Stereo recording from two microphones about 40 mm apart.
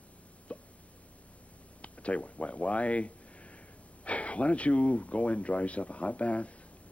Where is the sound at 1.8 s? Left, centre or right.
Left.